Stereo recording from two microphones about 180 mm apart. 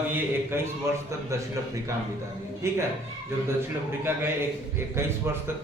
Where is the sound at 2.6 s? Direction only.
15° right (ahead or behind).